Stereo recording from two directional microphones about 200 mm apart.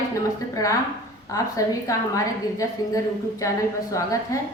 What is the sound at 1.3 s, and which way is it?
A woman's voice, 15° left (ahead or behind).